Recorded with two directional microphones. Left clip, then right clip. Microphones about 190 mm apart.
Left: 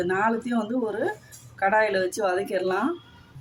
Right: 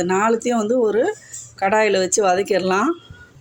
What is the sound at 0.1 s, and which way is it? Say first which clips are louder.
Speech: right 9 dB; 45° right (ahead or behind).